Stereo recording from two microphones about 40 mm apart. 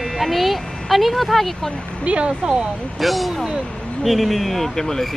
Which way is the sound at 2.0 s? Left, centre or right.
Right.